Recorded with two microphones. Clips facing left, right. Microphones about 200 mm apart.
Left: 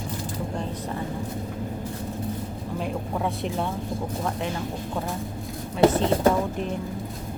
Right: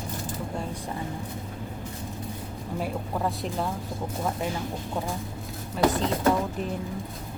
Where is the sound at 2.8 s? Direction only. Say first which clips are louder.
Left 1 dB; centre (ahead or behind).